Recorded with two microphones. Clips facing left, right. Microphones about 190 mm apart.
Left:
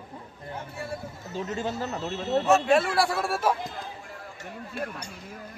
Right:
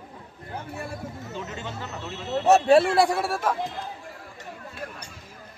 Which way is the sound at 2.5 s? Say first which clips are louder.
Right 6 dB; 35° right (ahead or behind).